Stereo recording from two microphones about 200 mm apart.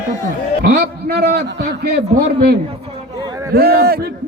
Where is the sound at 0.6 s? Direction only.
50° right (ahead or behind).